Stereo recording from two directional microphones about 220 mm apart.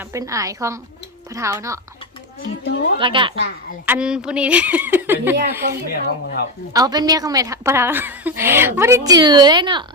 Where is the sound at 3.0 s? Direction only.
20° right (ahead or behind).